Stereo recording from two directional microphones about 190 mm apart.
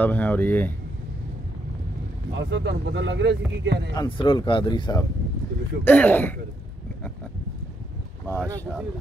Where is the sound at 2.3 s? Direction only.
70° right (ahead or behind).